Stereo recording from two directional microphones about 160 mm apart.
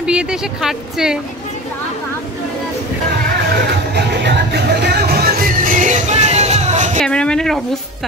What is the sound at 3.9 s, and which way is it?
Music, 90° right.